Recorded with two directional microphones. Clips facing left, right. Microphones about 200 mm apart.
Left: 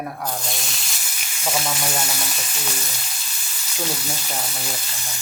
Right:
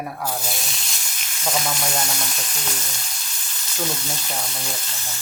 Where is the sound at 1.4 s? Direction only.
5° left (ahead or behind).